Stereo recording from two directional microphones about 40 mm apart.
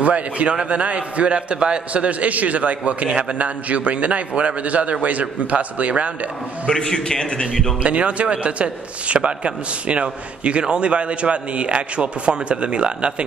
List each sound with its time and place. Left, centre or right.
0.0 s a man's voice: right
6.9 s a man's voice: centre
7.8 s a man's voice: right